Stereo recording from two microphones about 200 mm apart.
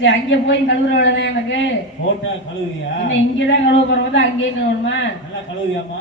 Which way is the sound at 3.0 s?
65° left (ahead or behind).